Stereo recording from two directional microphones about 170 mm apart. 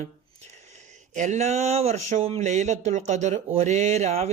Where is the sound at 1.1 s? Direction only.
45° right (ahead or behind).